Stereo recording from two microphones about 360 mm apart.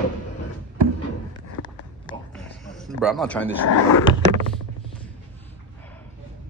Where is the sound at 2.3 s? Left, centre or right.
Centre.